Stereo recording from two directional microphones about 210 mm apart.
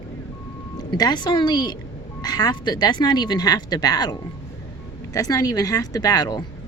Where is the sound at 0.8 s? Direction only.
20° left (ahead or behind).